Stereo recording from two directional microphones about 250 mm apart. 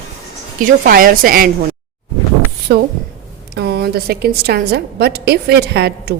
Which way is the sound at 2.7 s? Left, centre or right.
Right.